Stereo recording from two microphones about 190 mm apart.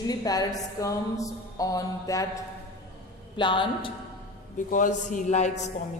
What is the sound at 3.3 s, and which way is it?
Speech, 25° left (ahead or behind).